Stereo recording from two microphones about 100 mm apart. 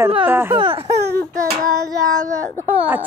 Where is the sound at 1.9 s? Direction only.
40° right (ahead or behind).